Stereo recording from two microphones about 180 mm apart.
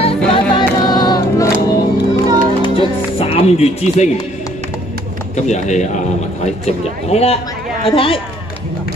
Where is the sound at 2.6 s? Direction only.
30° left (ahead or behind).